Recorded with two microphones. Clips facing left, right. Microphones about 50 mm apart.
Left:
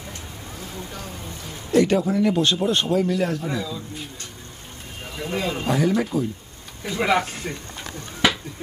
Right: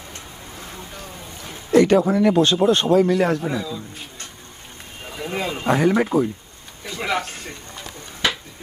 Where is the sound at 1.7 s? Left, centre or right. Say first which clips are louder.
Right 3 dB; right.